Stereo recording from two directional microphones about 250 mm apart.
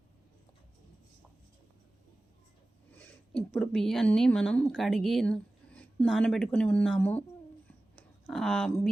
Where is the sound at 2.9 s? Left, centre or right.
Centre.